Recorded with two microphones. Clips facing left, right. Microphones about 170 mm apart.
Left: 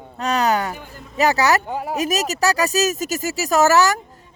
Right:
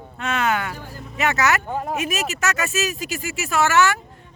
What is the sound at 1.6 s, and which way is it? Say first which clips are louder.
Speech: even; 10° left (ahead or behind).